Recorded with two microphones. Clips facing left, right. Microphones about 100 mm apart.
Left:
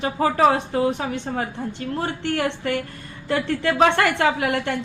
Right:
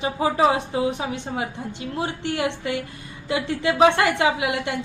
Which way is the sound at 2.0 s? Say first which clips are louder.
Left 2 dB; 50° left (ahead or behind).